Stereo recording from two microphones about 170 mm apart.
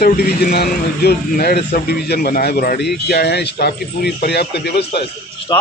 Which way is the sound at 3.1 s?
75° left (ahead or behind).